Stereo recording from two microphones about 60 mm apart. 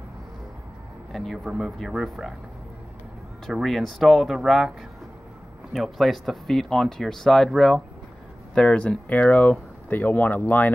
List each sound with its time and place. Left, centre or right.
1.1 s speech: centre
3.6 s speech: centre; by 10.7 s left